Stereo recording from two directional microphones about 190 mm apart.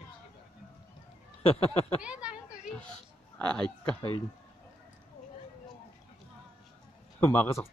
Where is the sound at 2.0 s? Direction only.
5° right (ahead or behind).